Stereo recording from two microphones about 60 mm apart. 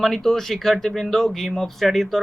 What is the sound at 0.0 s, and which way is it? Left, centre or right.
Speech, centre.